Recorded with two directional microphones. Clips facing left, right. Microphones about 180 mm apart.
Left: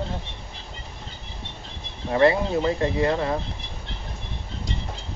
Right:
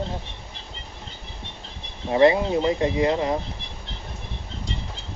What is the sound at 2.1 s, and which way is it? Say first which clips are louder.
Speech: right 2 dB; 20° right (ahead or behind).